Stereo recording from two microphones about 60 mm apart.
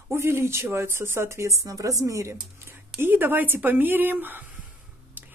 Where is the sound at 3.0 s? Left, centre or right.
Right.